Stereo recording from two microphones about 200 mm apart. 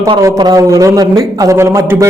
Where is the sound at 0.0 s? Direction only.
15° right (ahead or behind).